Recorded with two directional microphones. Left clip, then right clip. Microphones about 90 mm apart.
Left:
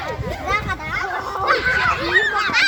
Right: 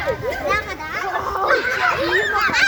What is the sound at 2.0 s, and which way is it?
Honk, 45° right (ahead or behind).